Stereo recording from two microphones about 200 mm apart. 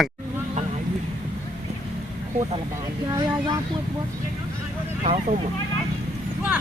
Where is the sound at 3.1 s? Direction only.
20° right (ahead or behind).